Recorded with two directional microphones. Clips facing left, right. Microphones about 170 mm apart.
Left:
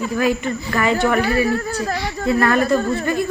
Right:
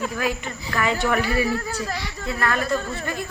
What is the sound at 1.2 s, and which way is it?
Speech, 60° left (ahead or behind).